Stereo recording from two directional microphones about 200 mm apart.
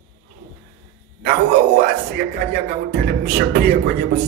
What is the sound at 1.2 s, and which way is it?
Speech, 45° right (ahead or behind).